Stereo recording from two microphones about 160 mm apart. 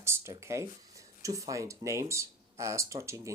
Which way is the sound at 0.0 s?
15° right (ahead or behind).